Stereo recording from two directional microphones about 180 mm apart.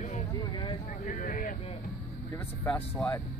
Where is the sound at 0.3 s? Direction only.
25° left (ahead or behind).